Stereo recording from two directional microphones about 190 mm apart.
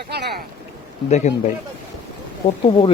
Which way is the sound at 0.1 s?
55° right (ahead or behind).